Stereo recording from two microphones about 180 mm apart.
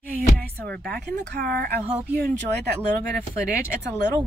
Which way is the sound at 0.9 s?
60° right (ahead or behind).